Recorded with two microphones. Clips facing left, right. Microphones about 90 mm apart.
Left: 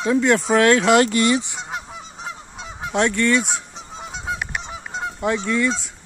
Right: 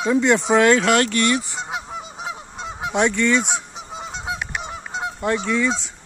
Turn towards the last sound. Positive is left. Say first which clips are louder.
# even
turn(degrees=0)  # may be behind; listen again after turning